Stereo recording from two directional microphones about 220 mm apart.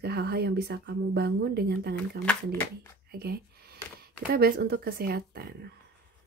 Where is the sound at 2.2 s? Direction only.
10° left (ahead or behind).